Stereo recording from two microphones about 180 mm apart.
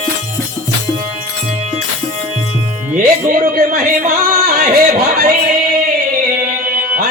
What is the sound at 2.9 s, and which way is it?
Speech, 50° right (ahead or behind).